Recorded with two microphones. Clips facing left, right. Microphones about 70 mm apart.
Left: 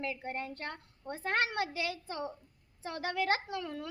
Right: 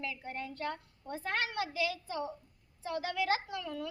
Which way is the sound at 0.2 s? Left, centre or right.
Left.